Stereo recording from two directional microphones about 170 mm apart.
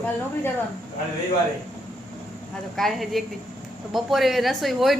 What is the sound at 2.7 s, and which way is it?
A woman's voice, centre (ahead or behind).